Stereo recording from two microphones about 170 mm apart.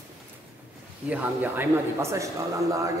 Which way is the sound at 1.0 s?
10° right (ahead or behind).